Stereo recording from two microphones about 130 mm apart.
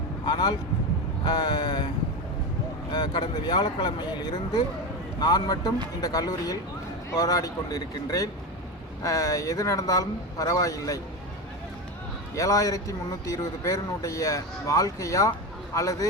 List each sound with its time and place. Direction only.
0.3 s speech: 35° left (ahead or behind)
2.9 s speech: 35° left (ahead or behind)
12.3 s speech: 25° left (ahead or behind)